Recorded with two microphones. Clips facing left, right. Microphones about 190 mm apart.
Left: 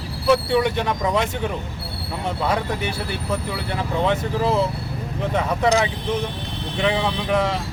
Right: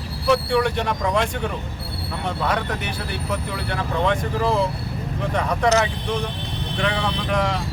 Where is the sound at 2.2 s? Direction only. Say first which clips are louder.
Left 1 dB; 10° left (ahead or behind).